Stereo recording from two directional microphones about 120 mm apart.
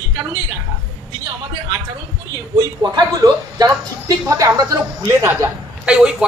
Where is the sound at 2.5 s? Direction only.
35° right (ahead or behind).